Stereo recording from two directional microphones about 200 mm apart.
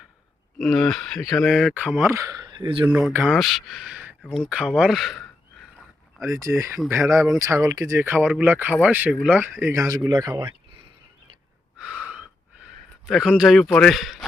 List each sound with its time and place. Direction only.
0.6 s speech: centre (ahead or behind); by 2.8 s 25° right (ahead or behind)
2.8 s speech: 5° right (ahead or behind)
4.2 s speech: 5° left (ahead or behind)
6.2 s speech: 15° right (ahead or behind)
11.8 s gasp: 5° right (ahead or behind)
13.1 s speech: centre (ahead or behind)